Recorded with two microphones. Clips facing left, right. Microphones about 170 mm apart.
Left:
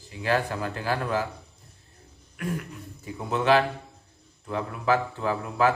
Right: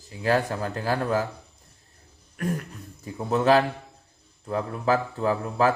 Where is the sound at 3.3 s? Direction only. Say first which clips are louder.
Right 2 dB; 40° right (ahead or behind).